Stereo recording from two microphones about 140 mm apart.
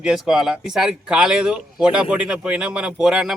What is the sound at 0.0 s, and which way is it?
Speech, 5° right (ahead or behind).